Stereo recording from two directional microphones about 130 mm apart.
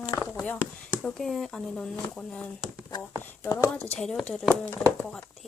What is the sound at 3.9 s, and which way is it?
Speech, 5° left (ahead or behind).